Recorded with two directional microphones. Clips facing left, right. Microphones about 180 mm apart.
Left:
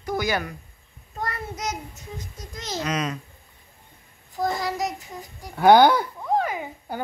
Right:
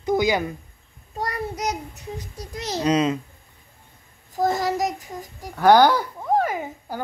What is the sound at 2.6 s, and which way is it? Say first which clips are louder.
Speech: right 7 dB; 35° right (ahead or behind).